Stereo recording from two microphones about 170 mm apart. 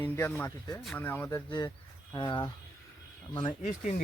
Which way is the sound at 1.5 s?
20° left (ahead or behind).